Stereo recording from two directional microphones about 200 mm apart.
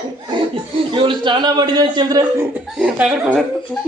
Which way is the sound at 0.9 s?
25° right (ahead or behind).